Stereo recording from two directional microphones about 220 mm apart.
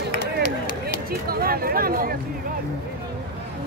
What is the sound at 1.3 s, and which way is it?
Speech, 40° right (ahead or behind).